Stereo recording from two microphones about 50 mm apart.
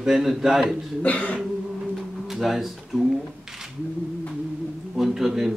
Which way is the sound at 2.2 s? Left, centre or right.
Centre.